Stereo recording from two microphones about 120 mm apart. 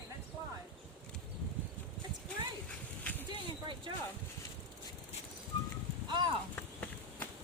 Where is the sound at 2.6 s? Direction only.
15° left (ahead or behind).